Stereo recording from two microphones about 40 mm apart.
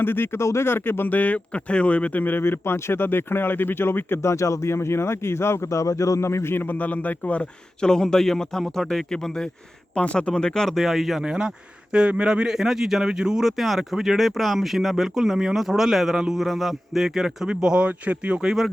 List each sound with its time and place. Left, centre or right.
0.0 s speech: left
1.1 s speech: left
2.4 s speech: left
4.7 s speech: left
6.6 s speech: left
7.8 s speech: centre
9.9 s speech: left
10.7 s speech: centre
11.2 s speech: centre
13.6 s speech: centre; by 17.8 s right
17.8 s speech: right
18.3 s speech: centre